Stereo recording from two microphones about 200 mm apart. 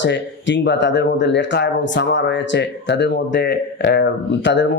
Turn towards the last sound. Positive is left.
turn(degrees=65)  # may be behind; listen again after turning